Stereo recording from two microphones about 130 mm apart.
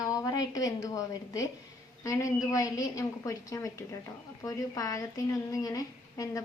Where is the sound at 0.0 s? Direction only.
25° left (ahead or behind).